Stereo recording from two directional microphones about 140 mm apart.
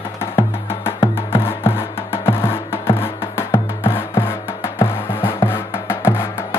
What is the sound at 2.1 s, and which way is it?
Music, 20° left (ahead or behind).